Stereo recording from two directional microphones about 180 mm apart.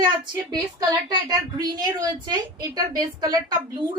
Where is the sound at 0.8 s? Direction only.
20° right (ahead or behind).